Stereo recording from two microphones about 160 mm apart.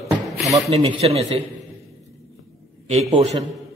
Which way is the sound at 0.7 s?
40° right (ahead or behind).